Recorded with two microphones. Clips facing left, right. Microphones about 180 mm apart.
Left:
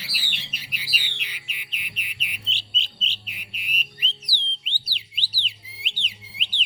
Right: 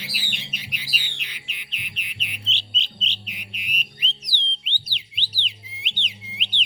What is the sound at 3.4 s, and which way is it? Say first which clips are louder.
Music: left 2 dB; 10° left (ahead or behind).